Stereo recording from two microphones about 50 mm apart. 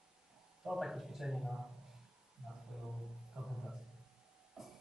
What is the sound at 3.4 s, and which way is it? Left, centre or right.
Music, centre.